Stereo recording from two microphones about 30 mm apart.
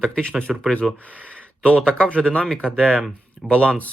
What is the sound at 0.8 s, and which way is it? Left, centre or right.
Speech, centre.